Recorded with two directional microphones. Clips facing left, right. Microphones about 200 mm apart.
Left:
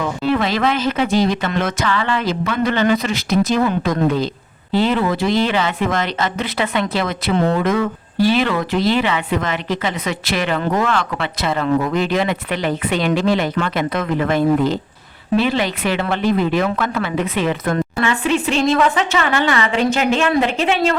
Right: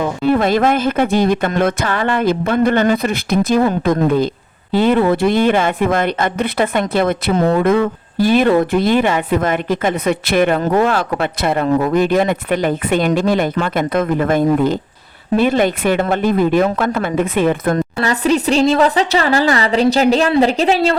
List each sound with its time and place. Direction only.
0.2 s speech: 50° right (ahead or behind)
11.6 s speech: 40° right (ahead or behind)